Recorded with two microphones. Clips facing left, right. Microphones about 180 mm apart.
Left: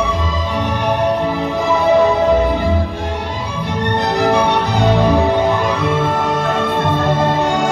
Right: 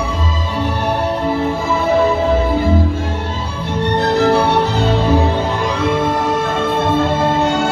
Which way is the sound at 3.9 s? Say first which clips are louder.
Right 2 dB; 15° left (ahead or behind).